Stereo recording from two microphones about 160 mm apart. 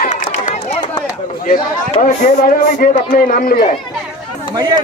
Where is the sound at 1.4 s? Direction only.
55° left (ahead or behind).